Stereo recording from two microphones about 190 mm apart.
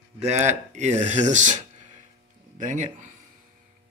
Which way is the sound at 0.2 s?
35° right (ahead or behind).